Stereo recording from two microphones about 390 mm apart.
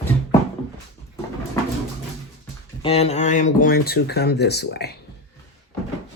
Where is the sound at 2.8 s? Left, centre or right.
Centre.